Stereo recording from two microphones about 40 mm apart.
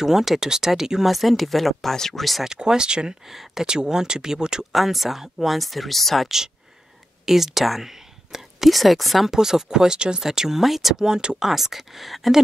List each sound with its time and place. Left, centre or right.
0.0 s speech: centre
1.1 s speech: centre
2.4 s speech: centre
3.3 s speech: centre
3.6 s speech: centre
4.7 s speech: centre
6.2 s speech: centre
9.3 s speech: centre
11.1 s speech: centre
11.4 s speech: centre